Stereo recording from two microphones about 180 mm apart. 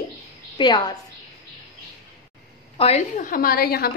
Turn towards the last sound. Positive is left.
turn(degrees=60)  # may be behind; listen again after turning